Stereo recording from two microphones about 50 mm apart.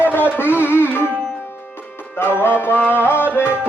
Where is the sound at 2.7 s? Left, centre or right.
Left.